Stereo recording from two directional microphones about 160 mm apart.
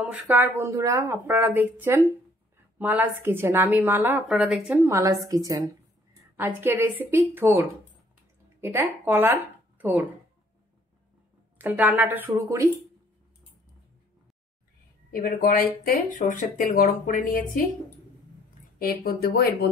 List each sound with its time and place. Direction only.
0.0 s speech: 10° right (ahead or behind)
4.6 s a woman's voice: 15° right (ahead or behind)
11.5 s speech: 10° right (ahead or behind)
15.0 s speech: 60° left (ahead or behind)
18.8 s speech: 70° left (ahead or behind)